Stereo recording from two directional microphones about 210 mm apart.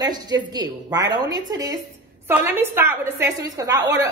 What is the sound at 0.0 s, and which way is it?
A woman's voice, 20° right (ahead or behind).